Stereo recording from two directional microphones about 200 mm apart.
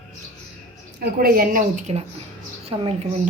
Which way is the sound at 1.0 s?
45° right (ahead or behind).